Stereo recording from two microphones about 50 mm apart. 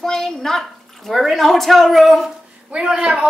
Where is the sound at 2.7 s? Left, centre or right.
Centre.